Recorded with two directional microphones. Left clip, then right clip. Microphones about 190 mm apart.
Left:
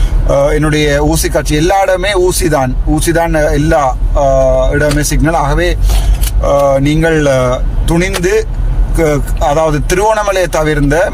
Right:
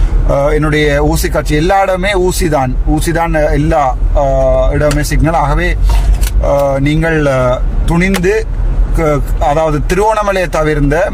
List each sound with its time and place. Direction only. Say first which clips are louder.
0.3 s a man's voice: left 1 dB; 10° right (ahead or behind)